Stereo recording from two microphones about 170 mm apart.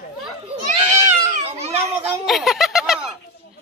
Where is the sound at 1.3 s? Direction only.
40° right (ahead or behind).